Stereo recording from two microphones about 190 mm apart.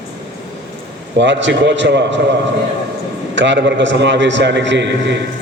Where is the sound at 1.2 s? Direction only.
70° right (ahead or behind).